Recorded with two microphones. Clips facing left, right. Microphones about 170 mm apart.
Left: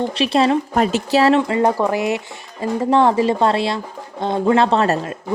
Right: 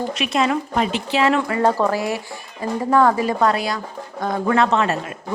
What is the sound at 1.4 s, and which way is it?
Speech, 20° left (ahead or behind).